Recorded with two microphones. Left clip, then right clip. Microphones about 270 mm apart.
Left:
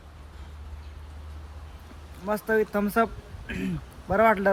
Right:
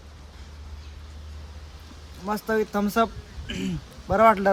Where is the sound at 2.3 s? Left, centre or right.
Centre.